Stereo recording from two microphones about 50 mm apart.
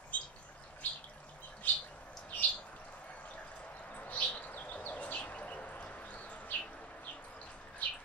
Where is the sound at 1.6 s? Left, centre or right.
Left.